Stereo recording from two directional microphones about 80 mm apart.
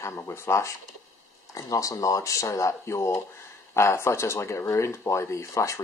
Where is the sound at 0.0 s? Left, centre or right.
Left.